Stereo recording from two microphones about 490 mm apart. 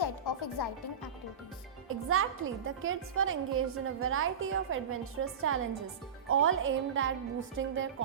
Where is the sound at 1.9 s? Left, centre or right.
Right.